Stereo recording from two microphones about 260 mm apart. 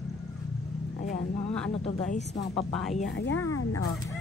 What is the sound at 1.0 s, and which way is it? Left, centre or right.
Speech, left.